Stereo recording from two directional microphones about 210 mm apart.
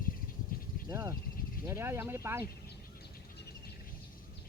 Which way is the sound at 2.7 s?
50° left (ahead or behind).